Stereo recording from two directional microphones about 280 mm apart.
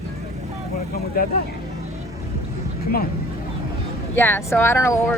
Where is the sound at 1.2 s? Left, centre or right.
Left.